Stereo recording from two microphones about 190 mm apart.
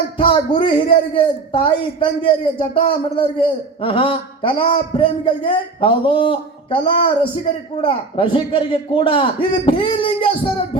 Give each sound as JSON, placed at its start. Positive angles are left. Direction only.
{"t": 0.2, "sound": "a man's voice", "side_deg": 25}